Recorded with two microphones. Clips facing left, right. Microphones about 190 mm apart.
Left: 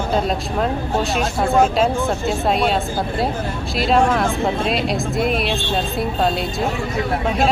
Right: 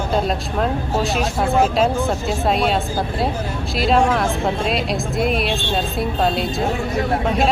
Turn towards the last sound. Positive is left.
turn(degrees=0)  # may be behind; listen again after turning